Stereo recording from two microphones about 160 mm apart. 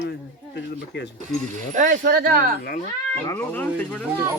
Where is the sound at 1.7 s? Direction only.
55° right (ahead or behind).